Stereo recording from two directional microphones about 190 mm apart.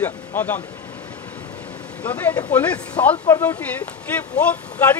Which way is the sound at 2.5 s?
10° left (ahead or behind).